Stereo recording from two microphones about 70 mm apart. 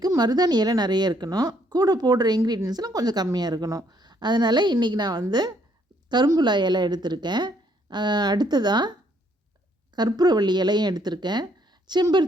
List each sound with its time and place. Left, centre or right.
0.2 s speech: right
6.1 s speech: right
10.1 s speech: right